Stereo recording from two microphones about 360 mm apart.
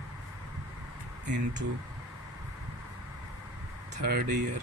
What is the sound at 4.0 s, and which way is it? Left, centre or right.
Speech, right.